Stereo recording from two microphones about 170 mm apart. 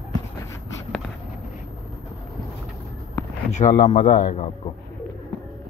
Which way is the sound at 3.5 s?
45° left (ahead or behind).